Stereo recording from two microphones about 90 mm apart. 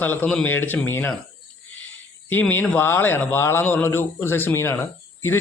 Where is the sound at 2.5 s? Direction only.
20° left (ahead or behind).